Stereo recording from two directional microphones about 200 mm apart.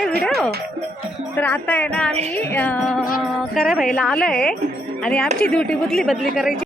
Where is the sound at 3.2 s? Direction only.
Centre (ahead or behind).